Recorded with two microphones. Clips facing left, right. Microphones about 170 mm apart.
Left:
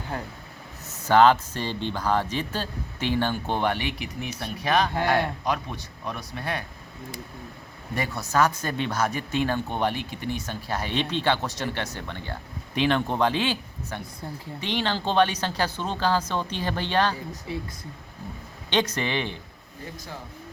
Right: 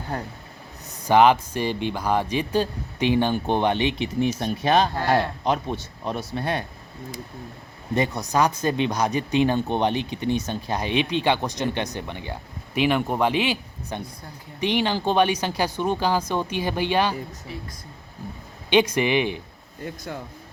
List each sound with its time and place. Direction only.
1.0 s speech: 15° right (ahead or behind)
7.9 s speech: 20° right (ahead or behind)
18.7 s speech: 10° right (ahead or behind)